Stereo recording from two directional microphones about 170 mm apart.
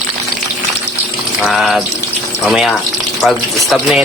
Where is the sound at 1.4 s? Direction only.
Centre (ahead or behind).